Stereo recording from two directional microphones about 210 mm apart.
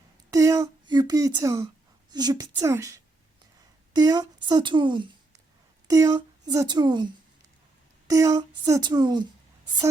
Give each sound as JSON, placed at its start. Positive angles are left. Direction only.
{"t": 0.3, "sound": "a woman's voice", "side_deg": -15}